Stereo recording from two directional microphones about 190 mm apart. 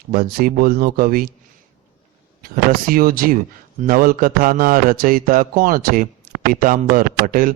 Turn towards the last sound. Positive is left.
turn(degrees=-50)  # may be behind; listen again after turning